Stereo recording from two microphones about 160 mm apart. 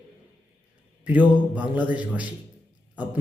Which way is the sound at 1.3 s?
10° right (ahead or behind).